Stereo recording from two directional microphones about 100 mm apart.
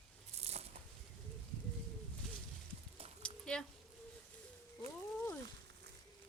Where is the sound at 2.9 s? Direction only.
80° right.